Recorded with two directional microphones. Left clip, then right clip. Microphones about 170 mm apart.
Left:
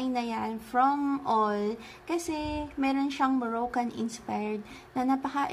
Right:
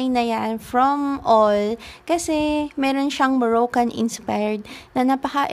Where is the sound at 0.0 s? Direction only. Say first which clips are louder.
Right 10 dB; 55° right (ahead or behind).